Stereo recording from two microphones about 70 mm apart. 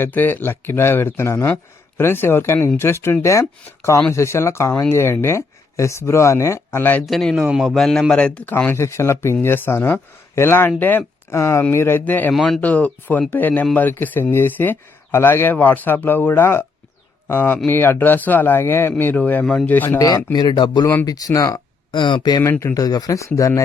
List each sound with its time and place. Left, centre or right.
0.0 s speech: left
7.0 s a man's voice: centre
8.4 s speech: left
10.8 s speech: left
11.3 s speech: left
20.0 s speech: left
20.3 s speech: left
21.0 s speech: left
22.1 s speech: left
22.6 s speech: left
23.2 s speech: left